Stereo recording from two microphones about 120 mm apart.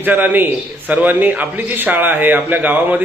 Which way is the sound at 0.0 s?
15° right (ahead or behind).